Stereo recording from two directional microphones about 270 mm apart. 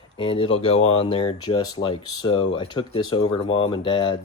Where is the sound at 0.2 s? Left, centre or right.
Centre.